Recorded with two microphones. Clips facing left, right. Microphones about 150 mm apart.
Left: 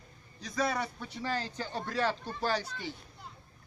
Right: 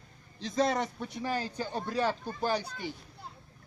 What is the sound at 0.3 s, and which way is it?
A man's voice, 25° right (ahead or behind).